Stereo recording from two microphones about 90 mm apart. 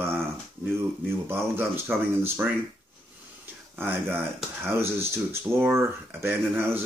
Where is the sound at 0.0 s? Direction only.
25° right (ahead or behind).